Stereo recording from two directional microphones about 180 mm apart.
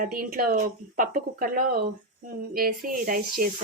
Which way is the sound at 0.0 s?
55° right (ahead or behind).